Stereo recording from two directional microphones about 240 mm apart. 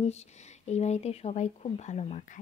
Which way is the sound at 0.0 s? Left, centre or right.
Left.